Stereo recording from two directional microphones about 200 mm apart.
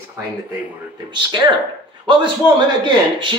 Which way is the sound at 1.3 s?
25° right (ahead or behind).